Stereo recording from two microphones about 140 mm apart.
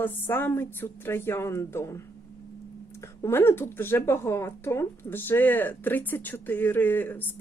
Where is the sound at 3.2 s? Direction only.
15° left (ahead or behind).